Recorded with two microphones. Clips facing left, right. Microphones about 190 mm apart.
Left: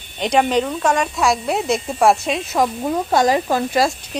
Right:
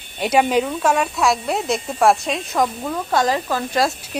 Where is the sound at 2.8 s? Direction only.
20° left (ahead or behind).